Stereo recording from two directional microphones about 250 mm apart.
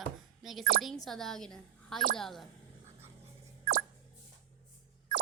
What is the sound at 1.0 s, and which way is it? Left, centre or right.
A child's voice, centre.